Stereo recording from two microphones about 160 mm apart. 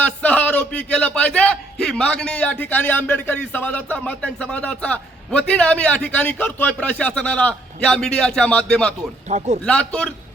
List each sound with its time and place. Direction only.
0.0 s a man's voice: 10° left (ahead or behind)
9.3 s a man's voice: 40° right (ahead or behind)
9.6 s a man's voice: 5° left (ahead or behind)